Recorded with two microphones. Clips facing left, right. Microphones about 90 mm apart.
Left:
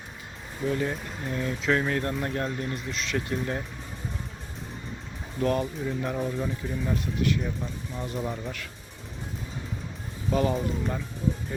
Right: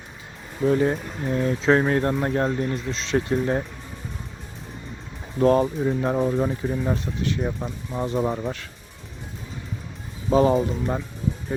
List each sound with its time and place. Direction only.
0.6 s speech: 30° right (ahead or behind)
5.4 s speech: 35° right (ahead or behind)
10.2 s speech: 35° right (ahead or behind)